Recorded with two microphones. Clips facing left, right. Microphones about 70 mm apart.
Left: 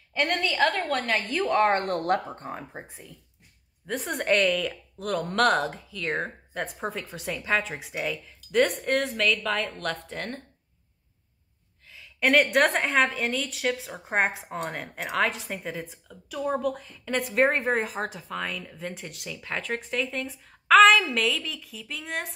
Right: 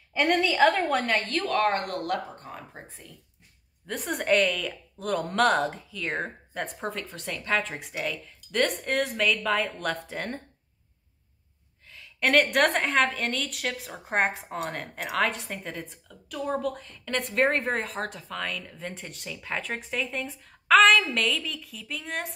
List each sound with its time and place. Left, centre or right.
0.1 s a woman's voice: centre
0.8 s a woman's voice: centre
1.2 s speech: centre
1.5 s speech: left
3.8 s a woman's voice: centre
11.9 s a woman's voice: centre